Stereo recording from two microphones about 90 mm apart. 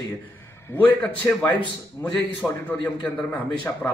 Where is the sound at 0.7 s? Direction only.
15° left (ahead or behind).